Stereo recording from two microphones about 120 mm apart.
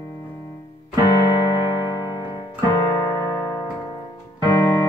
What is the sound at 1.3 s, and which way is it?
Music, 40° left (ahead or behind).